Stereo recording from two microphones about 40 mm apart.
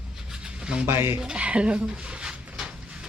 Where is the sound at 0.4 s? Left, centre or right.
Right.